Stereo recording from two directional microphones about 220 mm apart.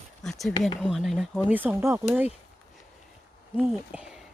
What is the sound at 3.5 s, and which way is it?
Speech, centre (ahead or behind).